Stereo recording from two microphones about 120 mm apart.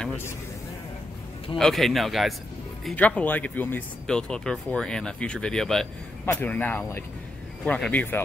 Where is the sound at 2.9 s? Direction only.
10° left (ahead or behind).